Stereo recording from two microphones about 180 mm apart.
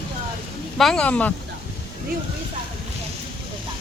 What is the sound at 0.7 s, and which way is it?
Speech, 5° left (ahead or behind).